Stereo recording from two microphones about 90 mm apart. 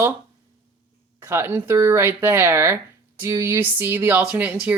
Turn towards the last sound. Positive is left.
turn(degrees=-20)  # may be behind; listen again after turning